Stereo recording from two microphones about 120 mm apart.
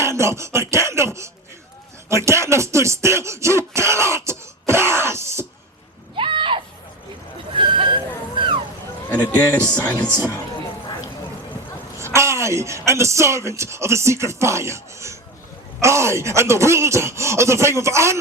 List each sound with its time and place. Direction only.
0.0 s a sound: 25° right (ahead or behind)
2.0 s speech: 25° right (ahead or behind)
3.8 s throat clearing: 25° right (ahead or behind)
6.1 s a sound: 45° right (ahead or behind)
9.1 s speech: 35° left (ahead or behind)
9.7 s speech: 10° left (ahead or behind)
10.1 s speech: 20° right (ahead or behind)
11.9 s speech: 25° right (ahead or behind)